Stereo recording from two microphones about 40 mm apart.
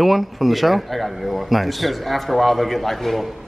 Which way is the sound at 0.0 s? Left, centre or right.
Centre.